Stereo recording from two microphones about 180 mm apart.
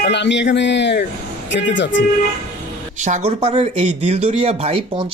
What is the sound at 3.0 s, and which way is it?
Speech, 40° right (ahead or behind).